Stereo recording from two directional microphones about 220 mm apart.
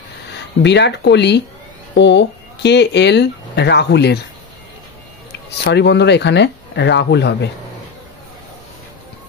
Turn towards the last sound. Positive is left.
turn(degrees=50)  # may be behind; listen again after turning